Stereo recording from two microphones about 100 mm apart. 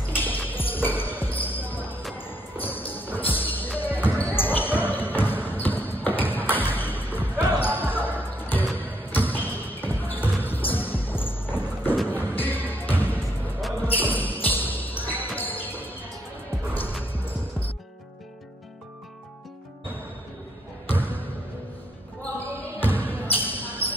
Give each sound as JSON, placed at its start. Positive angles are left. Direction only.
{"t": 0.1, "sound": "music", "side_deg": 20}
{"t": 0.5, "sound": "basketball bounce", "side_deg": 20}
{"t": 2.1, "sound": "music", "side_deg": 20}
{"t": 3.3, "sound": "basketball bounce", "side_deg": 20}
{"t": 12.1, "sound": "music", "side_deg": 20}
{"t": 13.8, "sound": "basketball bounce", "side_deg": 20}
{"t": 17.0, "sound": "music", "side_deg": 20}
{"t": 20.8, "sound": "basketball bounce", "side_deg": 20}
{"t": 22.8, "sound": "basketball bounce", "side_deg": 20}